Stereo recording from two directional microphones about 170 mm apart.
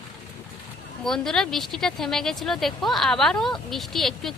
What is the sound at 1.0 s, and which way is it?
Speech, centre (ahead or behind).